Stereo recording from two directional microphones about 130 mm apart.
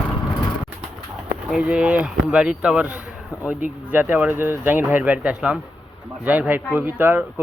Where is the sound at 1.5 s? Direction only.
10° right (ahead or behind).